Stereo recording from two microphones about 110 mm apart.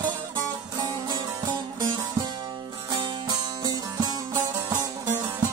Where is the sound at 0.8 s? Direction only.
45° right (ahead or behind).